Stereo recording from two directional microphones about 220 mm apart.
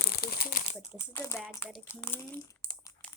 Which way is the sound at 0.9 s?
15° left (ahead or behind).